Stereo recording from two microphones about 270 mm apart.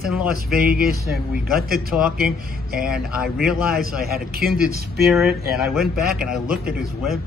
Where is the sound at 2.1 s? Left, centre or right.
Right.